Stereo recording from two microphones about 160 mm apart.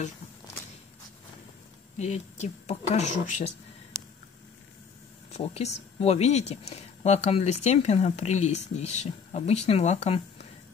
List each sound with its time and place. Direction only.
2.0 s speech: 45° left (ahead or behind)
5.3 s speech: 40° left (ahead or behind)